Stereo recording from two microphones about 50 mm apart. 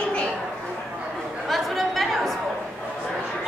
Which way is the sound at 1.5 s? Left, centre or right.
Centre.